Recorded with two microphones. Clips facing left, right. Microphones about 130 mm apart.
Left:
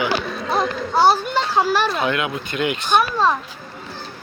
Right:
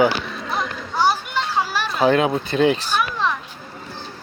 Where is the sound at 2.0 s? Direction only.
35° right (ahead or behind).